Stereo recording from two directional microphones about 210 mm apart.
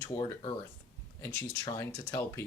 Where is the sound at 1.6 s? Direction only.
15° left (ahead or behind).